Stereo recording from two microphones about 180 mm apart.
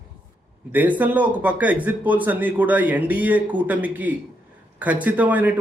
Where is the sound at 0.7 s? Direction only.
10° right (ahead or behind).